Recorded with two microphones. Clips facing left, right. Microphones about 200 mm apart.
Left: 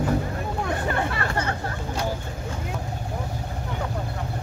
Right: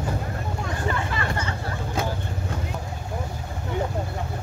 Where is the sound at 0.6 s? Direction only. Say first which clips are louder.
Left 2 dB; 60° left (ahead or behind).